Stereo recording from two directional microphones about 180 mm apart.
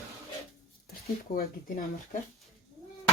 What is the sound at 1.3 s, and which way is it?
Speech, 50° left (ahead or behind).